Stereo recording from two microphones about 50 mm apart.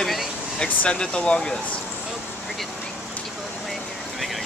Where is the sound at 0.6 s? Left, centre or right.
Centre.